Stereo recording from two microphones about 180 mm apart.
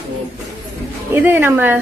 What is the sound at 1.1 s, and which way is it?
Speech, 10° right (ahead or behind).